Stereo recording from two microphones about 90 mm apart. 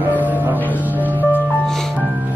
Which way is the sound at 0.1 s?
20° left (ahead or behind).